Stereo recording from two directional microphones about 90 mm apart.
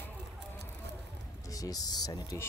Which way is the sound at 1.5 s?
45° left (ahead or behind).